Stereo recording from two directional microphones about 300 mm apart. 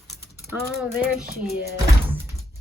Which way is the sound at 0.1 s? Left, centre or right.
Centre.